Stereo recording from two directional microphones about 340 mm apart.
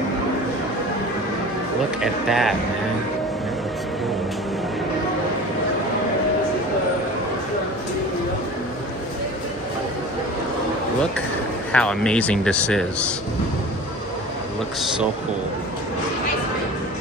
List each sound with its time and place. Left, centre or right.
2.0 s speech: centre
11.7 s speech: centre